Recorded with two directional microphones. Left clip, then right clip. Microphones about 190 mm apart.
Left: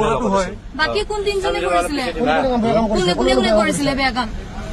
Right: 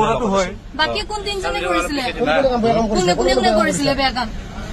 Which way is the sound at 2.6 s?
50° right (ahead or behind).